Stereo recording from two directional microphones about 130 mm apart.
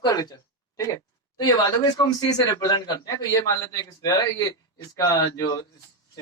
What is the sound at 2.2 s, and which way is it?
A man's voice, 30° left (ahead or behind).